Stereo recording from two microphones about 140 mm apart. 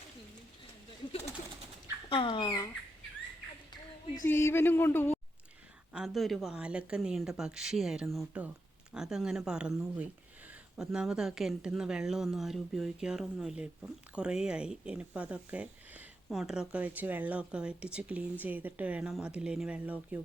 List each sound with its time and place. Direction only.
2.0 s dog: 35° left (ahead or behind)
4.2 s speech: 20° left (ahead or behind)
5.9 s speech: centre (ahead or behind)